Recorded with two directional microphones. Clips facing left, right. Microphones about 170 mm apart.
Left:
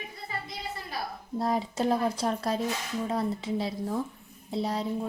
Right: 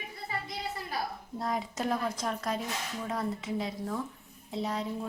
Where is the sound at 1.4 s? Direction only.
30° left (ahead or behind).